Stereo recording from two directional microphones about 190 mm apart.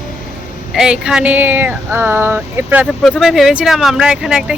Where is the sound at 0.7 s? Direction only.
5° right (ahead or behind).